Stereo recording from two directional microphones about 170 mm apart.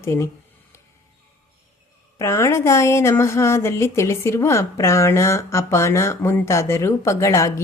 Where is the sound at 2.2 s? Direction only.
15° left (ahead or behind).